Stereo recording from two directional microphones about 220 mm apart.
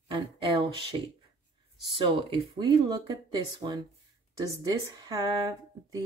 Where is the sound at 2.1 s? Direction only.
25° right (ahead or behind).